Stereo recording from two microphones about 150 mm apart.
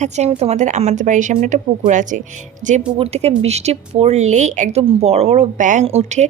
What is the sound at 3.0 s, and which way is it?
Speech, 45° right (ahead or behind).